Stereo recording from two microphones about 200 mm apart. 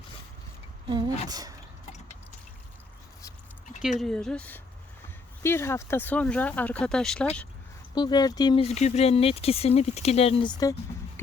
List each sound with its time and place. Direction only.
0.9 s speech: 20° right (ahead or behind)
4.0 s speech: 5° left (ahead or behind)
7.9 s speech: 20° left (ahead or behind)